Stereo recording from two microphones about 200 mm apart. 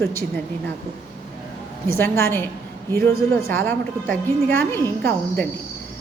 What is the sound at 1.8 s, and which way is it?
A woman's voice, 15° left (ahead or behind).